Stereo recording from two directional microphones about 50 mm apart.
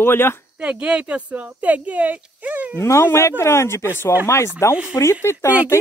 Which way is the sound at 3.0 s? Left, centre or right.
Left.